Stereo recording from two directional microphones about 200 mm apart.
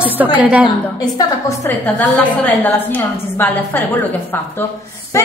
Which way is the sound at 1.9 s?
10° left (ahead or behind).